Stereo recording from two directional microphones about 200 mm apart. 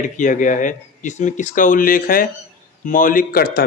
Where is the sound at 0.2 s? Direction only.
40° left (ahead or behind).